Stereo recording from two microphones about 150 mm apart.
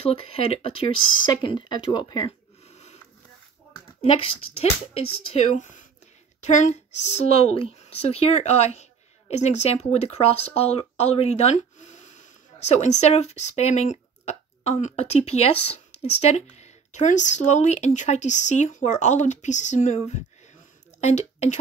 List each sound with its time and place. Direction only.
0.0 s speech: 40° left (ahead or behind)
4.0 s a woman's voice: 35° left (ahead or behind)